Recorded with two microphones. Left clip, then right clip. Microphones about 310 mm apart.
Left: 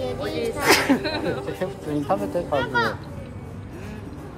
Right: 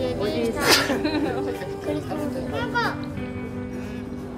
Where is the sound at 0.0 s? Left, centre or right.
Centre.